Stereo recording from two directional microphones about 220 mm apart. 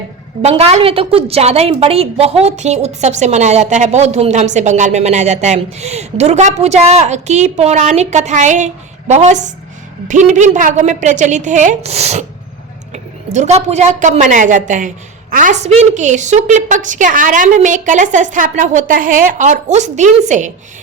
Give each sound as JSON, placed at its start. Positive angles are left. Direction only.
{"t": 0.4, "sound": "a woman's voice", "side_deg": -30}